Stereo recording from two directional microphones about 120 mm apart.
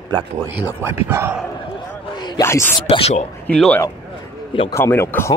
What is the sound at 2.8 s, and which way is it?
Speech, 60° left (ahead or behind).